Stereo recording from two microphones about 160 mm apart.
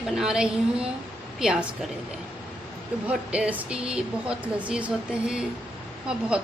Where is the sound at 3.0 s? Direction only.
10° right (ahead or behind).